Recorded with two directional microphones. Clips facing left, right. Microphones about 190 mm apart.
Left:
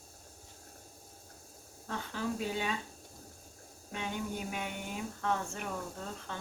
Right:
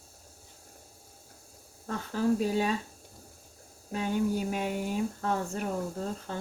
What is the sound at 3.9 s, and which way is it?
Speech, 40° right (ahead or behind).